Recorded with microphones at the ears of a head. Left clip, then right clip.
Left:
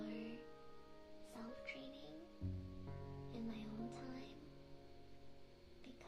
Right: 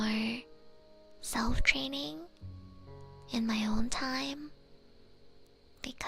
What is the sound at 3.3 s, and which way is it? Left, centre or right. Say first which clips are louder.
Speech: right 19 dB; right.